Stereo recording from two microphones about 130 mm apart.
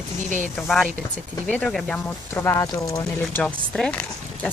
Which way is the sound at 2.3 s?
20° left (ahead or behind).